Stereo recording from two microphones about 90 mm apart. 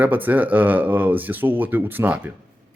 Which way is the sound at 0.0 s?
20° right (ahead or behind).